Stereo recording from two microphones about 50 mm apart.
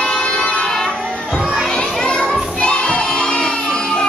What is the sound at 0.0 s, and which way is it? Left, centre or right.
Vehicle, centre.